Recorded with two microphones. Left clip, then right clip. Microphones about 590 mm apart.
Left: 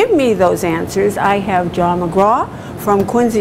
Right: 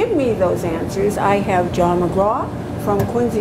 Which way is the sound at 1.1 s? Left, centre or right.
Left.